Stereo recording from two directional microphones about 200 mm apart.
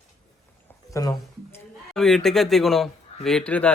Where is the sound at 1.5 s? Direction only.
Centre (ahead or behind).